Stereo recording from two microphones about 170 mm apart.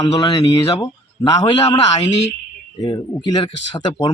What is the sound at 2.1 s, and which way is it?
Speech, 90° left.